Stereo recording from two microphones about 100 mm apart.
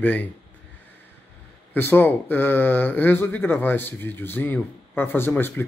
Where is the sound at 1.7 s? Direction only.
20° left (ahead or behind).